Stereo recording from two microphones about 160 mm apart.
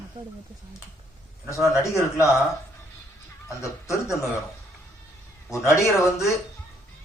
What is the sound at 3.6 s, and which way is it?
Speech, 20° left (ahead or behind).